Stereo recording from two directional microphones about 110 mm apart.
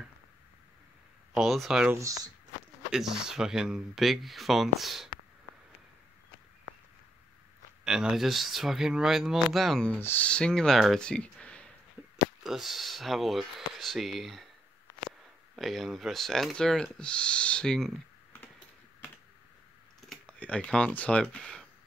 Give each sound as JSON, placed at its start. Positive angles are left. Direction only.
{"t": 1.3, "sound": "speech", "side_deg": 0}
{"t": 2.0, "sound": "speech", "side_deg": -30}
{"t": 2.9, "sound": "speech", "side_deg": -5}
{"t": 7.8, "sound": "speech", "side_deg": -5}
{"t": 9.8, "sound": "speech", "side_deg": 15}
{"t": 12.4, "sound": "speech", "side_deg": 0}
{"t": 15.5, "sound": "speech", "side_deg": 0}
{"t": 20.1, "sound": "speech", "side_deg": 10}